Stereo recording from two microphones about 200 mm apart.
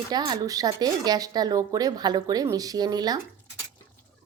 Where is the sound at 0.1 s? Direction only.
20° right (ahead or behind).